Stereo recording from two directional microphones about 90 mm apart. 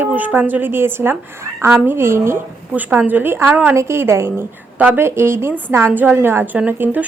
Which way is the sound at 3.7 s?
30° right (ahead or behind).